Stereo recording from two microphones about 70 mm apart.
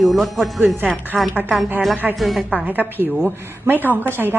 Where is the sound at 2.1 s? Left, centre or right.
Centre.